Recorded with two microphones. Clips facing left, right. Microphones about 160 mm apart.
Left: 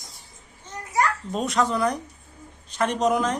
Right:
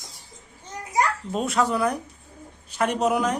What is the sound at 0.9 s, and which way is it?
A child's voice, 5° right (ahead or behind).